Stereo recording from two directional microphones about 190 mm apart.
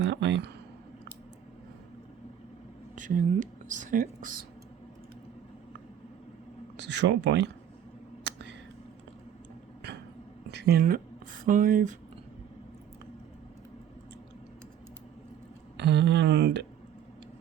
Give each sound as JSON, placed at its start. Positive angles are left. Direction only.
{"t": 0.0, "sound": "speech", "side_deg": -65}
{"t": 2.9, "sound": "speech", "side_deg": -40}
{"t": 7.0, "sound": "speech", "side_deg": -70}
{"t": 8.2, "sound": "a sound", "side_deg": -70}
{"t": 10.6, "sound": "speech", "side_deg": -50}
{"t": 15.8, "sound": "speech", "side_deg": -65}